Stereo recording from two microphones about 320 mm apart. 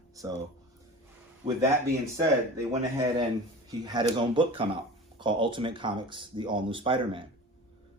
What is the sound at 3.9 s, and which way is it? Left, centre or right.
Speech, centre.